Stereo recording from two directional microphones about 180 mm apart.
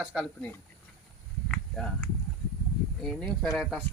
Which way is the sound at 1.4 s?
5° left (ahead or behind).